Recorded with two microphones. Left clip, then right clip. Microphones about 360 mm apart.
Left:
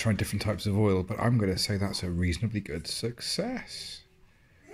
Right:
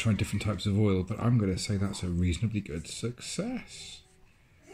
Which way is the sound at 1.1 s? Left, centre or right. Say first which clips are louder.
Left 3 dB; centre.